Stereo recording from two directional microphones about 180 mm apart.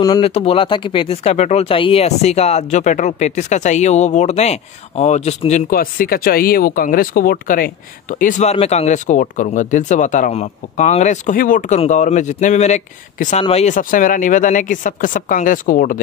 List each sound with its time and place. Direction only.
0.0 s speech: 25° left (ahead or behind)
0.3 s speech: 35° left (ahead or behind)
5.7 s speech: 55° left (ahead or behind)